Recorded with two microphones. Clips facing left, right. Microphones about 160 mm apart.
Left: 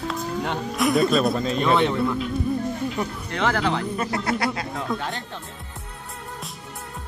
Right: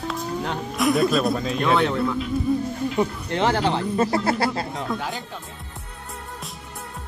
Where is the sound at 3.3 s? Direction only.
30° right (ahead or behind).